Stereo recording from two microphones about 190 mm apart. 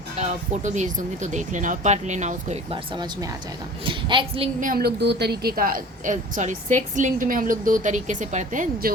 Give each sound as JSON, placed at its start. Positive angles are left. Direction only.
{"t": 0.2, "sound": "speech", "side_deg": -40}
{"t": 2.9, "sound": "a woman's voice", "side_deg": -20}
{"t": 4.6, "sound": "a woman's voice", "side_deg": -50}